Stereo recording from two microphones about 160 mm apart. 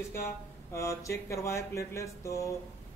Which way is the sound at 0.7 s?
20° left (ahead or behind).